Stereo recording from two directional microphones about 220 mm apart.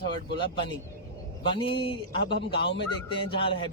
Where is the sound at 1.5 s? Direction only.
25° left (ahead or behind).